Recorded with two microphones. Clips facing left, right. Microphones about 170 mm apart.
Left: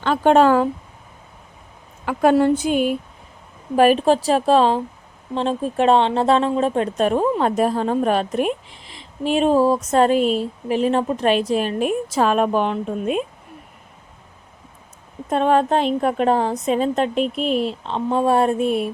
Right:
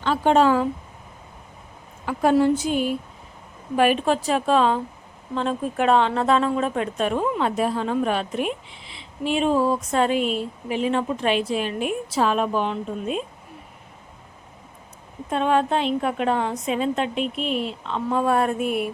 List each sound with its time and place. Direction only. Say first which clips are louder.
0.0 s a woman's voice: left 4 dB; 60° left (ahead or behind)
2.0 s a woman's voice: left 3 dB; 60° left (ahead or behind)
3.8 s a woman's voice: left 5 dB; 35° left (ahead or behind); by 13.2 s 60° left (ahead or behind)
15.3 s a woman's voice: left 4 dB; 40° left (ahead or behind)